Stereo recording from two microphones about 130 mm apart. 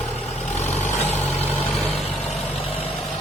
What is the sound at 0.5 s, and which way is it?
Vehicle, 60° left (ahead or behind).